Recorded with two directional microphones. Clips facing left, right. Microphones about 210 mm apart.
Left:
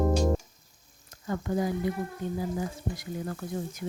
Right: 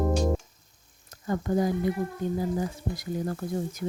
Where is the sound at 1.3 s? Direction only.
40° right (ahead or behind).